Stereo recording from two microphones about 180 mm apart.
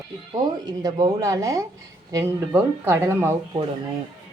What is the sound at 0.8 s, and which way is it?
Speech, 20° right (ahead or behind).